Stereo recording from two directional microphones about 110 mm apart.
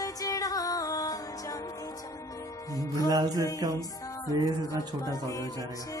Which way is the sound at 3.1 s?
35° right (ahead or behind).